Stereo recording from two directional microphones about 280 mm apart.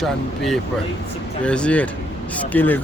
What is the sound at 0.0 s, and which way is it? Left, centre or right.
Speech, centre.